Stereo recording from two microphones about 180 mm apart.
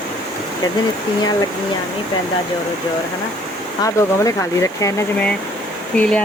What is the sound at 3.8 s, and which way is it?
Speech, 15° left (ahead or behind).